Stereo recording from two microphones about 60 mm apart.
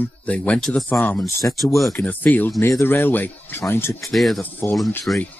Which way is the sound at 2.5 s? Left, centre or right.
Left.